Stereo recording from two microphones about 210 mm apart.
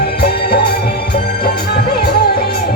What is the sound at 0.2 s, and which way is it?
Music, 50° left (ahead or behind).